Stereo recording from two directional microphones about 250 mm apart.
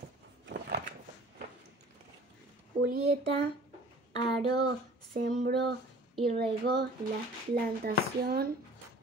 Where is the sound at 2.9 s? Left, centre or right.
Right.